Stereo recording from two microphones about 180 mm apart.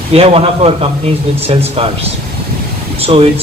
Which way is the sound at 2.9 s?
35° right (ahead or behind).